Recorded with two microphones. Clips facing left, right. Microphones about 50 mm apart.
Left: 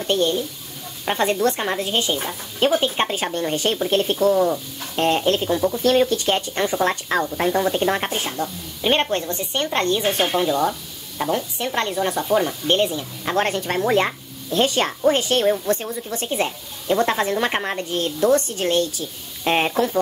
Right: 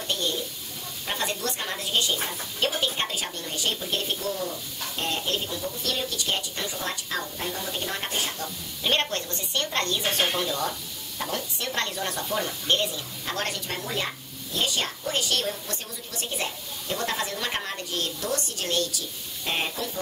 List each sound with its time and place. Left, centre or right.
0.0 s speech: left
8.1 s speech: left